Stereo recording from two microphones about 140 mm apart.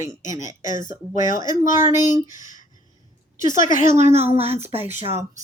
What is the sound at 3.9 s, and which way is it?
Speech, 50° right (ahead or behind).